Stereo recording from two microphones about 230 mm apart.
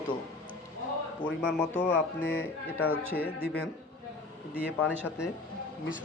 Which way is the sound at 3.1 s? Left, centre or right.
Left.